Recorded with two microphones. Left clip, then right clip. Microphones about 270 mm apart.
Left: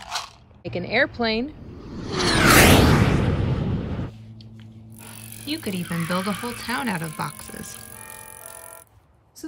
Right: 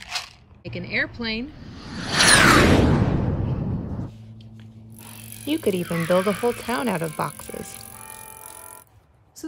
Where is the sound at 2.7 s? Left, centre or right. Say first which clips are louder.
Left 3 dB; left.